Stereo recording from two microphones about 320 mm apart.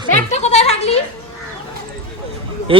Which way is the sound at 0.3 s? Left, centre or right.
Left.